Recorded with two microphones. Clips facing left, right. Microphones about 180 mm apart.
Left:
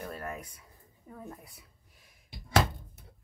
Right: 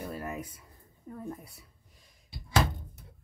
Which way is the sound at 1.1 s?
Centre (ahead or behind).